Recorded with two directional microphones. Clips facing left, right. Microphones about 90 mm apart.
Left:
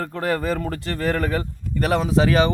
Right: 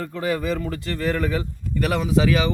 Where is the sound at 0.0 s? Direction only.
55° left (ahead or behind).